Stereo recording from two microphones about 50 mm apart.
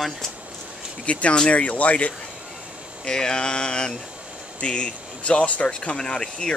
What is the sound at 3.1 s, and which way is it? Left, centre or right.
Speech, centre.